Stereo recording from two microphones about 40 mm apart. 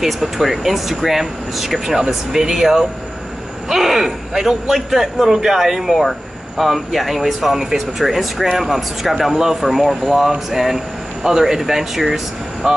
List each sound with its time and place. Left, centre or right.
0.0 s speech: centre
12.6 s speech: right